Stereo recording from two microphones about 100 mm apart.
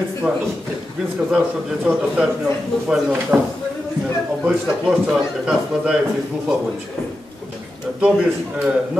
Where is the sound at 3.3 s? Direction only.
15° right (ahead or behind).